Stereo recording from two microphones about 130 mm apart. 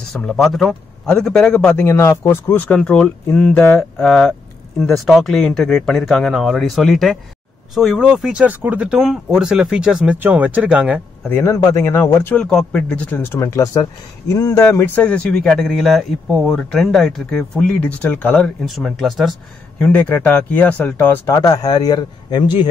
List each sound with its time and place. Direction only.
0.1 s speech: 5° left (ahead or behind)
2.0 s speech: 20° left (ahead or behind); by 11.0 s 10° right (ahead or behind)
11.2 s speech: 20° left (ahead or behind)
12.4 s speech: 5° left (ahead or behind)
15.0 s speech: 5° left (ahead or behind)
18.7 s speech: centre (ahead or behind)
19.8 s speech: 10° left (ahead or behind)
21.3 s a man's voice: 30° left (ahead or behind)